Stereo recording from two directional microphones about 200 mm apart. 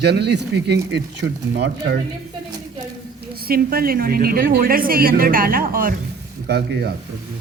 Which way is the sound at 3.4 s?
50° right (ahead or behind).